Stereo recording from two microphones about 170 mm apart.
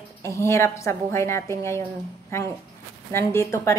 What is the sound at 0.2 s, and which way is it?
A woman's voice, 15° left (ahead or behind).